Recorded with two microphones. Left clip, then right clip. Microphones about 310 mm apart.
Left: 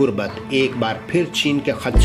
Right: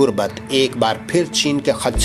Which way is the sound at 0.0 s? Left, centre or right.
Right.